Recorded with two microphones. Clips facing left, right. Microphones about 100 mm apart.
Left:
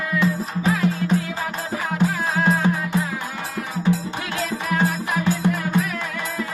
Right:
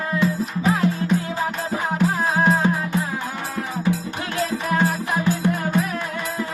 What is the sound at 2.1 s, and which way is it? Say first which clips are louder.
Music: right 2 dB; 25° right (ahead or behind).